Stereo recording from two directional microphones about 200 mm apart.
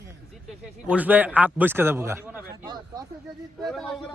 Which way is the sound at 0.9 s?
10° right (ahead or behind).